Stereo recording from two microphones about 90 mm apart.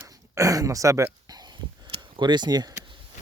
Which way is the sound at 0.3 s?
40° right (ahead or behind).